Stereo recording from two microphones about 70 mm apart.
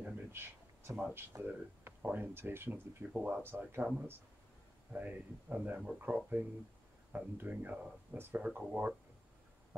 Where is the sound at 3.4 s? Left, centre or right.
Right.